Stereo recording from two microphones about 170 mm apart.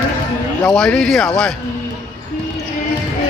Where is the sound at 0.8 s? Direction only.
5° left (ahead or behind).